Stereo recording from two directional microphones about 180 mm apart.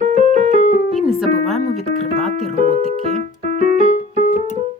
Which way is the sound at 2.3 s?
35° right (ahead or behind).